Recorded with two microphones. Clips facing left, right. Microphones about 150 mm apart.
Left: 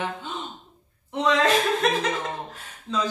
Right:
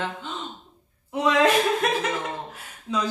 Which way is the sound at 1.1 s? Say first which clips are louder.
Right 1 dB; 10° right (ahead or behind).